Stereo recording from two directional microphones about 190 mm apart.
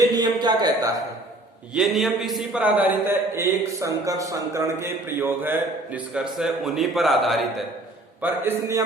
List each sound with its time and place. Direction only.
0.1 s a sound: 20° right (ahead or behind)
1.7 s a man's voice: centre (ahead or behind)
8.2 s a man's voice: 15° right (ahead or behind)